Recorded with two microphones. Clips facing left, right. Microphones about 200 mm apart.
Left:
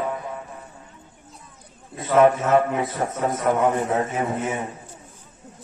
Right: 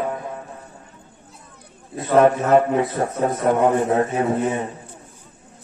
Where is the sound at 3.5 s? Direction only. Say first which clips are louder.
Right 4 dB; 35° right (ahead or behind).